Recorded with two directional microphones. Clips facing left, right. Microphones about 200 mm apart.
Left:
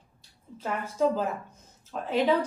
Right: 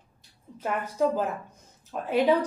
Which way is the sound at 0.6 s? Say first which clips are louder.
Right 1 dB; 15° right (ahead or behind).